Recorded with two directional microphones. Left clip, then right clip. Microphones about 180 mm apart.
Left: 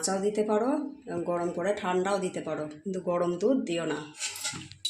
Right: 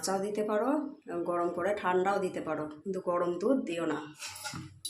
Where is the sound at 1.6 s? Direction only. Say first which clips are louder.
Even; 10° left (ahead or behind).